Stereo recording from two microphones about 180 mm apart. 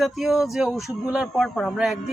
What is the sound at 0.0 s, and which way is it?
Speech, centre (ahead or behind).